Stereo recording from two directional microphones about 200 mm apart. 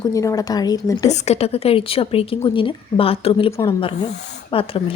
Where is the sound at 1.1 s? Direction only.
35° left (ahead or behind).